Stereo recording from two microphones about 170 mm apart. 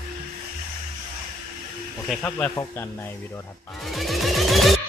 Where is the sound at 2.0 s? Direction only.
10° left (ahead or behind).